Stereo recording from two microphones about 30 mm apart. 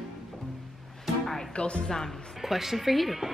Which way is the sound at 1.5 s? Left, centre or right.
Left.